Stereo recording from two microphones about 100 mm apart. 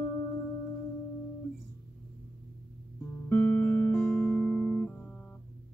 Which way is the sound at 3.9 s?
5° left (ahead or behind).